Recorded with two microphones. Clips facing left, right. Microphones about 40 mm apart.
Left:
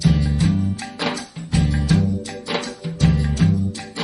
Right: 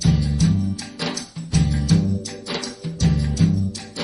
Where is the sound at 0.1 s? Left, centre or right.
Left.